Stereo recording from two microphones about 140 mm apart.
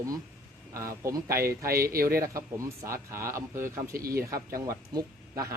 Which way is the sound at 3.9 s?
90° right.